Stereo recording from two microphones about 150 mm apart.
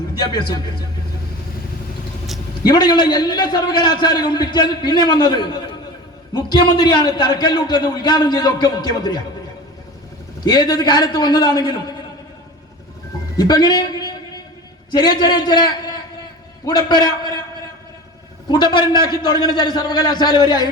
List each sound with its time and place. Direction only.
0.1 s a man's voice: 30° left (ahead or behind)
2.6 s a man's voice: 30° left (ahead or behind)
10.4 s a man's voice: 30° left (ahead or behind)
13.3 s a man's voice: 25° left (ahead or behind)
14.8 s a man's voice: 30° left (ahead or behind)
18.4 s a man's voice: 30° left (ahead or behind)